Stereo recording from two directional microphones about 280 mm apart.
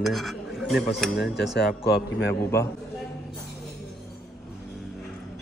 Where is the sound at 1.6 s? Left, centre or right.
Left.